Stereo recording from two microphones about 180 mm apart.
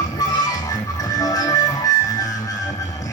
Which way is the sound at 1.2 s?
20° left (ahead or behind).